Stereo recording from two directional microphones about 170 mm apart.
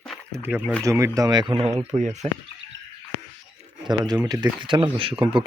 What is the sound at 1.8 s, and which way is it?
Speech, 40° right (ahead or behind).